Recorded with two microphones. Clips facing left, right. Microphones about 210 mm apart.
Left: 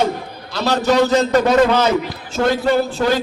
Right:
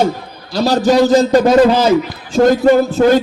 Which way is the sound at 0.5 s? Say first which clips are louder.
Right 4 dB; 35° right (ahead or behind).